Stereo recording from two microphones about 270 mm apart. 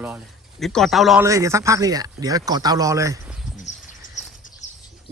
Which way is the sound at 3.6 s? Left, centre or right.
Left.